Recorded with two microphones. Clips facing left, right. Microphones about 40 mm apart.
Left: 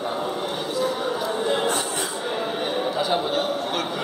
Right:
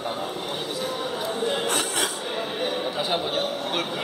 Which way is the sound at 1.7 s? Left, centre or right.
Right.